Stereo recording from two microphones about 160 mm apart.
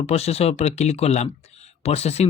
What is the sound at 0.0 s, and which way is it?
A man's voice, 40° left (ahead or behind).